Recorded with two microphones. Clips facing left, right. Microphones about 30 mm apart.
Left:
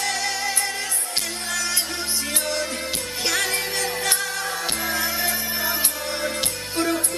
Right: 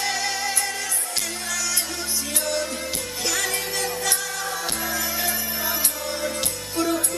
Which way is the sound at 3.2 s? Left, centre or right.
Left.